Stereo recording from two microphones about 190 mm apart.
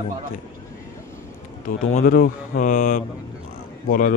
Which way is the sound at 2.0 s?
50° left (ahead or behind).